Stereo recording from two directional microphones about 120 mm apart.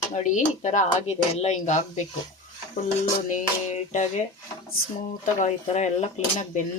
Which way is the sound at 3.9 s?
90° left.